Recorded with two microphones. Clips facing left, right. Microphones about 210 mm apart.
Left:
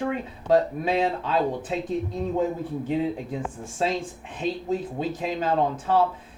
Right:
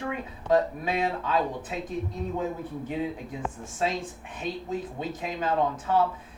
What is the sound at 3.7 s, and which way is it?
Speech, 30° left (ahead or behind).